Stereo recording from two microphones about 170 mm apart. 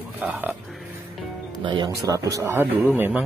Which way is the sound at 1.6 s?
30° right (ahead or behind).